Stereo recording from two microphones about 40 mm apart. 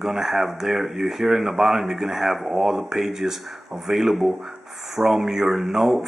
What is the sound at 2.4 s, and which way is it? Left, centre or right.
Speech, right.